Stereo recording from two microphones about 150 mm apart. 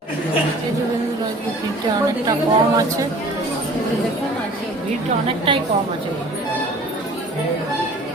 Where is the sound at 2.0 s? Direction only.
25° right (ahead or behind).